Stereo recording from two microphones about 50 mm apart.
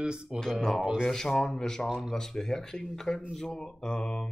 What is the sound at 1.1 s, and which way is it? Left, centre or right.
Speech, centre.